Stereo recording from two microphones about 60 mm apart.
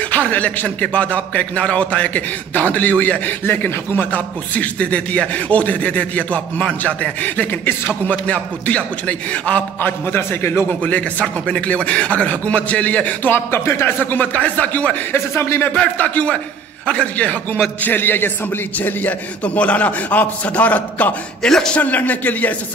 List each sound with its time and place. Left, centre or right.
0.1 s speech: left
9.8 s a man's voice: left
10.7 s speech: left
13.3 s speech: left
15.1 s a man's voice: left
15.7 s speech: left
17.8 s a man's voice: left
21.4 s a man's voice: centre
21.7 s speech: left